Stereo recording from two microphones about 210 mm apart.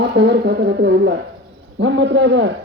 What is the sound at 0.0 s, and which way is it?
Speech, 55° right (ahead or behind).